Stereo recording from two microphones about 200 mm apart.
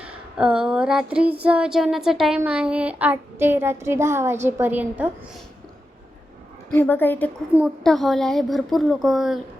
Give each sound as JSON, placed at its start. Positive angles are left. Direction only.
{"t": 0.0, "sound": "a sound", "side_deg": -5}
{"t": 1.5, "sound": "speech", "side_deg": -5}
{"t": 6.7, "sound": "a woman's voice", "side_deg": 10}
{"t": 7.5, "sound": "a woman's voice", "side_deg": 0}